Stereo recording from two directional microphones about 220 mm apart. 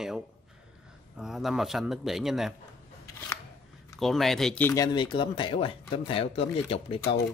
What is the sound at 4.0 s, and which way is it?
Speech, centre (ahead or behind).